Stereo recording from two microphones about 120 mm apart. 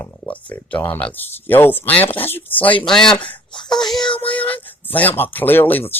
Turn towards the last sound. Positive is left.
turn(degrees=15)  # may be behind; listen again after turning